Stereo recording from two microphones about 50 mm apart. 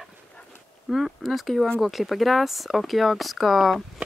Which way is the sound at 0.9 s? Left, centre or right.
Centre.